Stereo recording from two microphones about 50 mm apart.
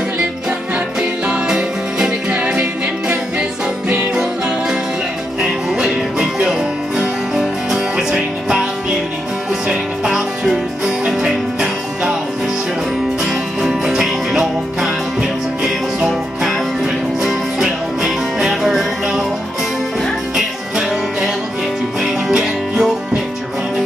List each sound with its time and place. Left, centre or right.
1.2 s music: centre
2.3 s music: right
4.1 s music: centre
10.0 s music: centre
13.2 s music: centre
22.0 s music: centre